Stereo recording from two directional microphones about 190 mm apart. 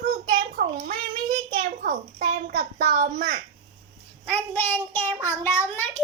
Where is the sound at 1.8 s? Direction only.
45° right (ahead or behind).